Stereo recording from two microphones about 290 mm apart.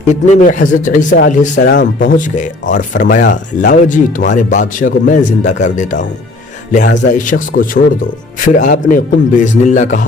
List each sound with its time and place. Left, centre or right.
0.1 s speech: left